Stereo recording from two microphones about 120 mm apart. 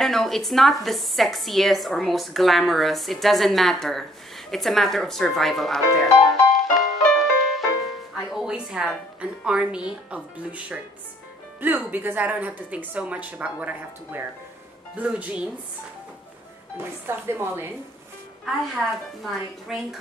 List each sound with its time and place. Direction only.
0.0 s a woman's voice: centre (ahead or behind)
6.5 s music: centre (ahead or behind)
8.2 s a woman's voice: centre (ahead or behind)
16.7 s speech: 15° right (ahead or behind)
18.4 s a woman's voice: centre (ahead or behind)